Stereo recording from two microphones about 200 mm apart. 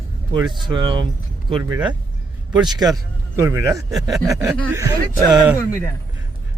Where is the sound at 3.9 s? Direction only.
Centre (ahead or behind).